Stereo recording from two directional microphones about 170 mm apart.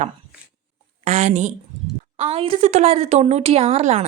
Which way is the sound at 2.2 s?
30° right (ahead or behind).